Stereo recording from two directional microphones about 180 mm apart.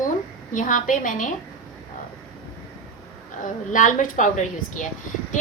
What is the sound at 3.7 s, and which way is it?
A woman's voice, 45° left (ahead or behind).